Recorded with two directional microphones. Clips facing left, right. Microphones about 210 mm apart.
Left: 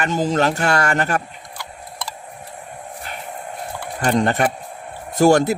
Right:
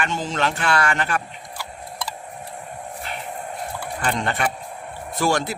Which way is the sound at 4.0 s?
45° left (ahead or behind).